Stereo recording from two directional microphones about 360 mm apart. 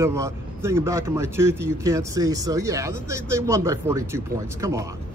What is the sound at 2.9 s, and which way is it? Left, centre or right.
Speech, right.